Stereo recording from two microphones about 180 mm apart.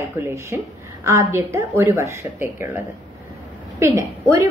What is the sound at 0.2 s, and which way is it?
A woman's voice, 15° right (ahead or behind).